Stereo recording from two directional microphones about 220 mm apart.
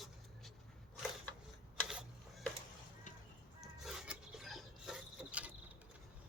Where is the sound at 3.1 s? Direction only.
35° left (ahead or behind).